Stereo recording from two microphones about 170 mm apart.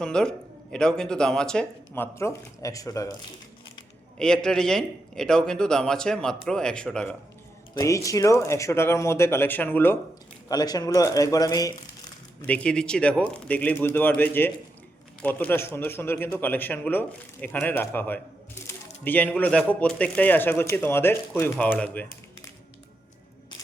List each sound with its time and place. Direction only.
0.0 s a man's voice: 5° left (ahead or behind)
2.1 s speech: 15° left (ahead or behind)
4.2 s a man's voice: 5° left (ahead or behind)
7.8 s speech: 20° left (ahead or behind)
10.5 s speech: 25° left (ahead or behind)
12.4 s speech: 10° left (ahead or behind)